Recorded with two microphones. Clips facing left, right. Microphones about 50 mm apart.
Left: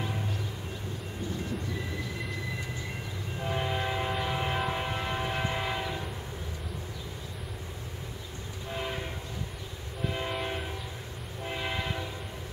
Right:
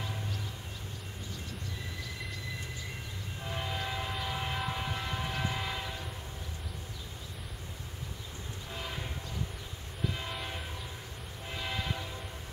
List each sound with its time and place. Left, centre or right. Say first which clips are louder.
3.3 s train: left 6 dB; left
8.7 s train: left 6 dB; left